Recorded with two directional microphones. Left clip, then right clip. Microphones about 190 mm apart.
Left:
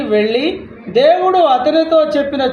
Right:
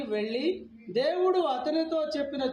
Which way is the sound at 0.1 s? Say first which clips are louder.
Left 16 dB; 15° left (ahead or behind).